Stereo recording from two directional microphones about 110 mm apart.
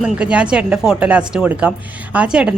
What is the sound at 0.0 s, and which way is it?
A man's voice, 10° right (ahead or behind).